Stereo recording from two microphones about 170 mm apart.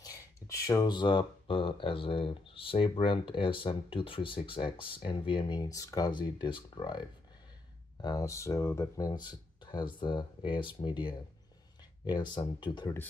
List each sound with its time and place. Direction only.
0.0 s speech: 20° left (ahead or behind)